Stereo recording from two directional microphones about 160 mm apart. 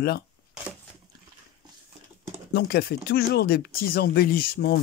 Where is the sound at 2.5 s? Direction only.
80° left.